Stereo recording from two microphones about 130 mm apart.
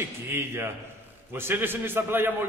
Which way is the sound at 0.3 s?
20° right (ahead or behind).